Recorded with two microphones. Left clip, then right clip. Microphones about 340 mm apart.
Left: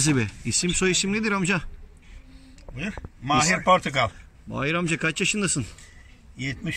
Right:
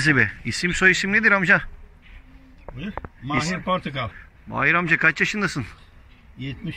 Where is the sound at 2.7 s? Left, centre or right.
Right.